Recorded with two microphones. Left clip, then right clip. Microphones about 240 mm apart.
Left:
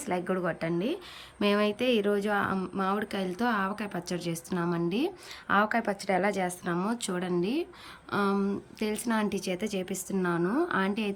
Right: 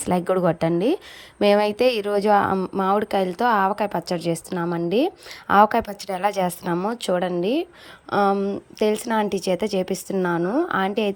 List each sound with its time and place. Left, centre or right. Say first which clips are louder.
0.0 s speech: right 10 dB; right
6.7 s a woman's voice: right 10 dB; centre